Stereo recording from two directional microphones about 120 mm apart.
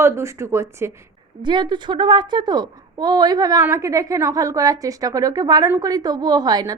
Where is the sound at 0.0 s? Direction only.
20° right (ahead or behind).